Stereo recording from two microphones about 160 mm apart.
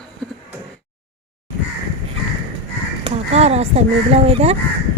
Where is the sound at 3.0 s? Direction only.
40° right (ahead or behind).